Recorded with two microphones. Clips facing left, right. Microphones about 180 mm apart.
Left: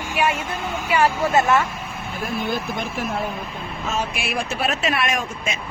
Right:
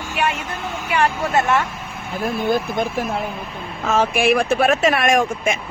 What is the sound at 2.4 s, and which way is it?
Speech, 50° right (ahead or behind).